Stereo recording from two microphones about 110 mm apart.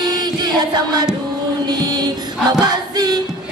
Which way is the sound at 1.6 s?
40° right (ahead or behind).